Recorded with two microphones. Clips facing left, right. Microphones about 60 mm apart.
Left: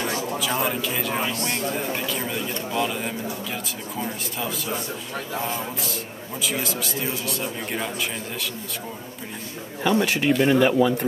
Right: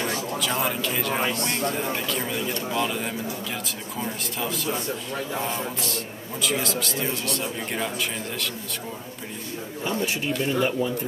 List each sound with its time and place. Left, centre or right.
0.0 s speech: centre
9.8 s a man's voice: left